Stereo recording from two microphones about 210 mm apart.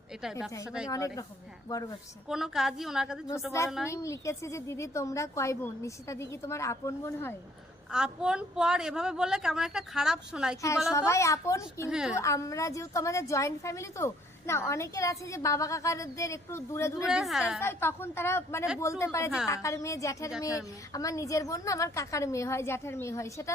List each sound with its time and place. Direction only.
0.9 s a woman's voice: 15° left (ahead or behind)
2.2 s a woman's voice: centre (ahead or behind)
3.8 s a woman's voice: 15° left (ahead or behind)
7.9 s a woman's voice: 5° right (ahead or behind)
10.9 s a woman's voice: 15° left (ahead or behind)
11.9 s a woman's voice: 5° right (ahead or behind)
12.2 s a woman's voice: 15° left (ahead or behind)
17.1 s a woman's voice: centre (ahead or behind)
17.6 s a woman's voice: 10° left (ahead or behind)